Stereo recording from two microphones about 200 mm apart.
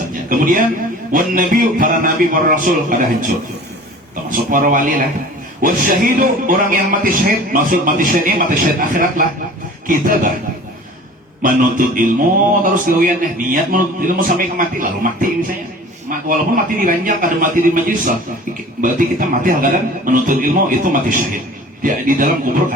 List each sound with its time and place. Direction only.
0.3 s a sound: 45° right (ahead or behind)
1.1 s speech: 45° right (ahead or behind)
4.3 s speech: 45° right (ahead or behind)
11.4 s a man's voice: 40° right (ahead or behind)